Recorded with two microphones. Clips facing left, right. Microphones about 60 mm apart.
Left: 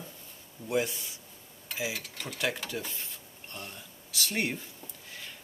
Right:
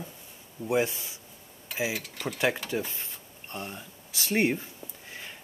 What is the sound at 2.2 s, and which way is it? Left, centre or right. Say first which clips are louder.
Speech: right 5 dB; centre.